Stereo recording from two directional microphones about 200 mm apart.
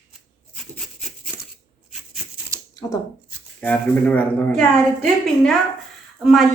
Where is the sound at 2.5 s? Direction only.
15° right (ahead or behind).